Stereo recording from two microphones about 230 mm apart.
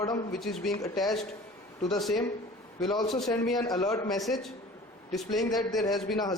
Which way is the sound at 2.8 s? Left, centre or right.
Centre.